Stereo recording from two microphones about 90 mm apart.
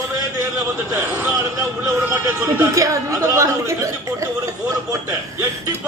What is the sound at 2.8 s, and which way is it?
Speech, 35° right (ahead or behind).